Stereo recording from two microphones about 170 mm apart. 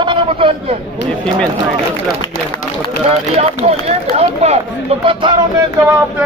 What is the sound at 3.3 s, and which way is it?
Speech, 40° right (ahead or behind).